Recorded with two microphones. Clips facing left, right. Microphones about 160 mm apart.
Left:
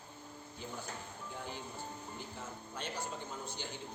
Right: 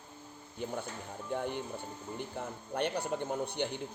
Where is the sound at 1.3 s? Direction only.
60° right (ahead or behind).